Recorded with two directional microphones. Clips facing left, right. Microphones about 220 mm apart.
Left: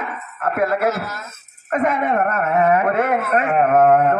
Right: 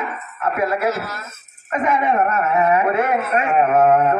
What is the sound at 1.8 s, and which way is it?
Speech, 55° left (ahead or behind).